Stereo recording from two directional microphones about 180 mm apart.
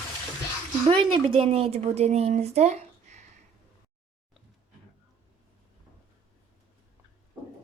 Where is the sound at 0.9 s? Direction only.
30° right (ahead or behind).